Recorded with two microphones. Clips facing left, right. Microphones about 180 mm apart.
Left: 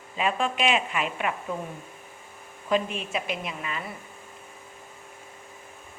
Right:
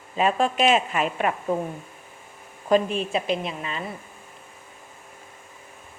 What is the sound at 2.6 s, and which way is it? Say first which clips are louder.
A woman's voice: right 5 dB; 40° right (ahead or behind).